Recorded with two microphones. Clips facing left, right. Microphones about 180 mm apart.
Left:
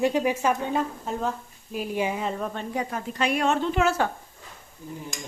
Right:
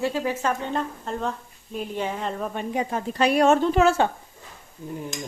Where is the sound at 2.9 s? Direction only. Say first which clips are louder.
Right 6 dB; 35° right (ahead or behind).